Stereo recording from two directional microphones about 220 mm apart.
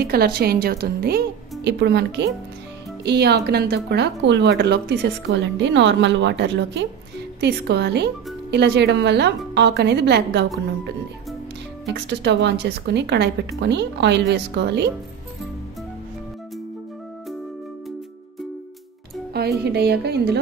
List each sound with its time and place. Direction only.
0.0 s a woman's voice: 45° right (ahead or behind)
11.8 s a woman's voice: 50° right (ahead or behind)
19.6 s a woman's voice: 45° right (ahead or behind)